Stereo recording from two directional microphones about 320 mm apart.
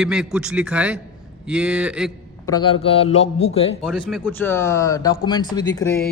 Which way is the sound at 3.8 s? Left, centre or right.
Centre.